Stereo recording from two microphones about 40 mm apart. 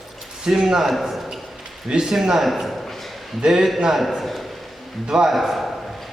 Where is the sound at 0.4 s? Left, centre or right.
Centre.